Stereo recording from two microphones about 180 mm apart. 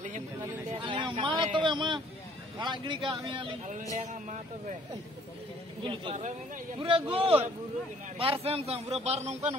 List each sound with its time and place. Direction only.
0.7 s a sound: 30° right (ahead or behind)
2.6 s speech: 25° right (ahead or behind)
4.1 s a man's voice: 40° right (ahead or behind)
5.9 s a man's voice: 30° right (ahead or behind)